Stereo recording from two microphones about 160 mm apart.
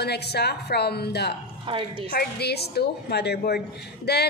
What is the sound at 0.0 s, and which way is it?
A woman's voice, 90° left.